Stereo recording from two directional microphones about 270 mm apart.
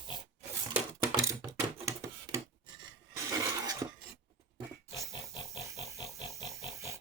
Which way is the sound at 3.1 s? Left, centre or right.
Centre.